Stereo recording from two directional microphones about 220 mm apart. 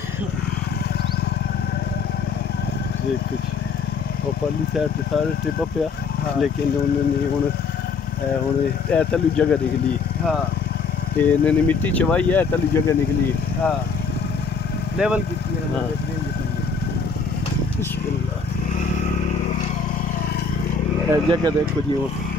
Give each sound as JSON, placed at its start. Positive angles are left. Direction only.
{"t": 8.9, "sound": "speech", "side_deg": 5}
{"t": 11.1, "sound": "speech", "side_deg": 10}
{"t": 15.0, "sound": "speech", "side_deg": -5}
{"t": 21.1, "sound": "speech", "side_deg": -15}